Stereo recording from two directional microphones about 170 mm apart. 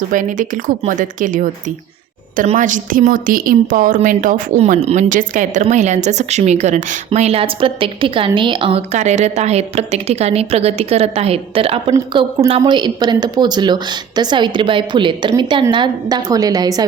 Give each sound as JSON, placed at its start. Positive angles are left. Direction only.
{"t": 0.1, "sound": "a woman's voice", "side_deg": -50}
{"t": 2.5, "sound": "a woman's voice", "side_deg": -50}